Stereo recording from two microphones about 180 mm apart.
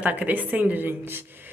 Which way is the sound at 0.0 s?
10° right (ahead or behind).